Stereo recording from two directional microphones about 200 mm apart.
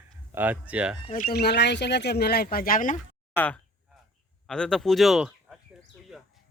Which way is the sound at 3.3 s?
5° left (ahead or behind).